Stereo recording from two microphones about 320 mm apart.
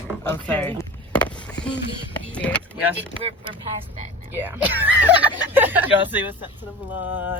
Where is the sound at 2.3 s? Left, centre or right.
Centre.